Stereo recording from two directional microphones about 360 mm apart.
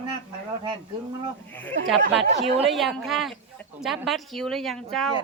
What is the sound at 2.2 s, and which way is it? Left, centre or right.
Speech, centre.